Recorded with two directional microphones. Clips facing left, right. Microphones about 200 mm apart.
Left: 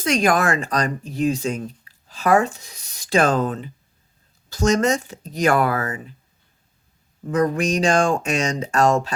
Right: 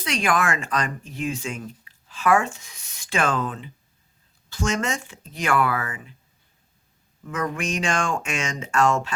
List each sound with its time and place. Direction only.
0.0 s speech: 40° left (ahead or behind)
7.3 s speech: 35° left (ahead or behind)